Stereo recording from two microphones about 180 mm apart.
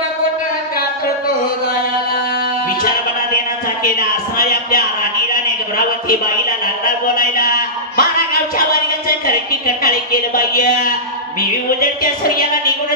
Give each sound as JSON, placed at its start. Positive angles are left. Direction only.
{"t": 7.2, "sound": "speech", "side_deg": 55}
{"t": 9.5, "sound": "a woman's voice", "side_deg": 55}